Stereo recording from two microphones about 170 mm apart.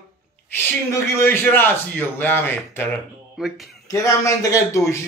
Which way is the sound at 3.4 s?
Centre (ahead or behind).